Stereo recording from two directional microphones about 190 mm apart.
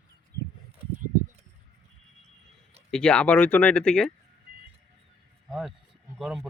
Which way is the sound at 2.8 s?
5° left (ahead or behind).